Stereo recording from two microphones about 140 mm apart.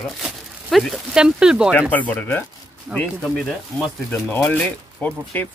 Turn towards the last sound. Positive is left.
turn(degrees=10)  # may be behind; listen again after turning